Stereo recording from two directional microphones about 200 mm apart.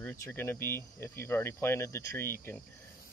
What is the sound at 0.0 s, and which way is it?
Speech, 10° left (ahead or behind).